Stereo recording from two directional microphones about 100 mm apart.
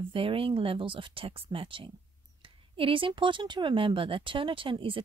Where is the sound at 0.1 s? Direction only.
65° right (ahead or behind).